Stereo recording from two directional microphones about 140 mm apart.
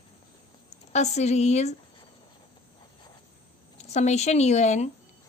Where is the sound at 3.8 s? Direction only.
55° left (ahead or behind).